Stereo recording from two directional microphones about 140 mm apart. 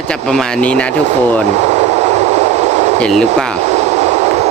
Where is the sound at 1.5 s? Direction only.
50° right (ahead or behind).